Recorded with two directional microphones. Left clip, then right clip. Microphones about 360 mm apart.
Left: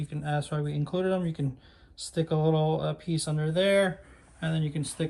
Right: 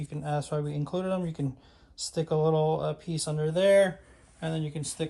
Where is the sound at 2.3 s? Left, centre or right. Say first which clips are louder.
Right 2 dB; centre.